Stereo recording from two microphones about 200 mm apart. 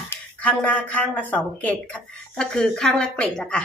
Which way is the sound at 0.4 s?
5° left (ahead or behind).